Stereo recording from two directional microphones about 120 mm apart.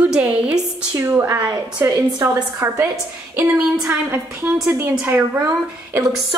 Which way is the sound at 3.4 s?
10° right (ahead or behind).